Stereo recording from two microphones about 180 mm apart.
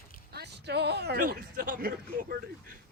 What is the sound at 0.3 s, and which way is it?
Speech, 65° right (ahead or behind).